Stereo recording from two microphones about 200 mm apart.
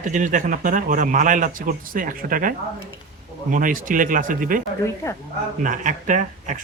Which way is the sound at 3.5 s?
40° right (ahead or behind).